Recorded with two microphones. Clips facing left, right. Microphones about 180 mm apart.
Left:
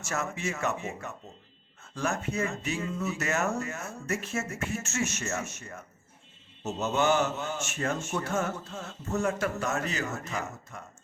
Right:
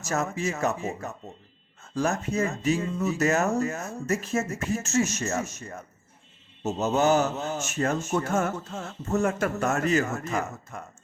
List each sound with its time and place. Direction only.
0.0 s a man's voice: 35° right (ahead or behind)